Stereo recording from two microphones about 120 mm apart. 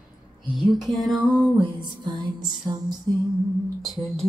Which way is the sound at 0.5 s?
Centre (ahead or behind).